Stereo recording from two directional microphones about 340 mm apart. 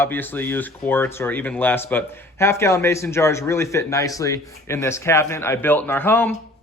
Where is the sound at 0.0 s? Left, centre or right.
Centre.